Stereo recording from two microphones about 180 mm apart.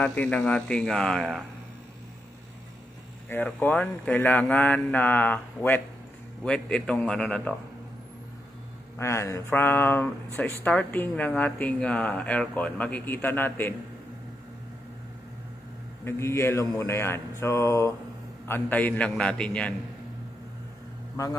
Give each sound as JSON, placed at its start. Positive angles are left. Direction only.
{"t": 0.0, "sound": "speech", "side_deg": 10}
{"t": 3.3, "sound": "speech", "side_deg": 10}
{"t": 8.9, "sound": "speech", "side_deg": 15}
{"t": 16.0, "sound": "speech", "side_deg": 15}